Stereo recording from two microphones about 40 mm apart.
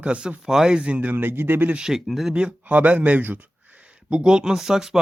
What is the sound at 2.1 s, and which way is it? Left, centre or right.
Speech, centre.